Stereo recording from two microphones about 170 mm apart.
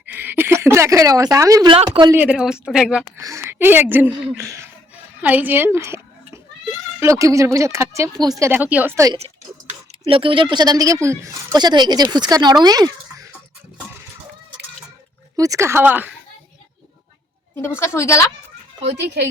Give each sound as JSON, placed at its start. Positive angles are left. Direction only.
{"t": 0.1, "sound": "speech", "side_deg": -10}
{"t": 1.7, "sound": "a woman's voice", "side_deg": -30}
{"t": 2.1, "sound": "speech", "side_deg": -5}
{"t": 3.2, "sound": "a child's voice", "side_deg": -20}
{"t": 10.1, "sound": "a woman's voice", "side_deg": -30}
{"t": 15.4, "sound": "speech", "side_deg": -20}
{"t": 17.6, "sound": "a woman's voice", "side_deg": 15}
{"t": 18.9, "sound": "a child's voice", "side_deg": -75}